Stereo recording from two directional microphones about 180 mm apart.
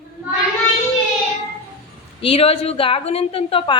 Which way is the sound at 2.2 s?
30° left (ahead or behind).